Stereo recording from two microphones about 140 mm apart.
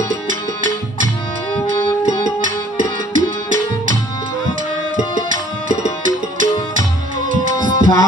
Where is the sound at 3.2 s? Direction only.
70° right (ahead or behind).